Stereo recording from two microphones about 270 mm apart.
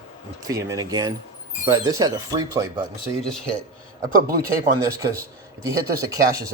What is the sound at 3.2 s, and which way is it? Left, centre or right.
Speech, centre.